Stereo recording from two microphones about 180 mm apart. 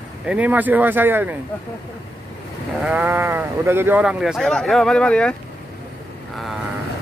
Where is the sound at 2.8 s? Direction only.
5° right (ahead or behind).